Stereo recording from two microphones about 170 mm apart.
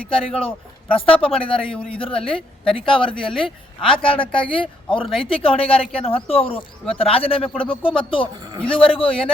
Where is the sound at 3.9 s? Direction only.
30° left (ahead or behind).